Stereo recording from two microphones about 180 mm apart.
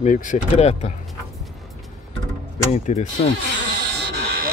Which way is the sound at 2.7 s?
35° left (ahead or behind).